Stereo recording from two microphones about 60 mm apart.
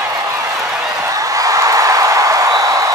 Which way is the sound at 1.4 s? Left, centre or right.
Right.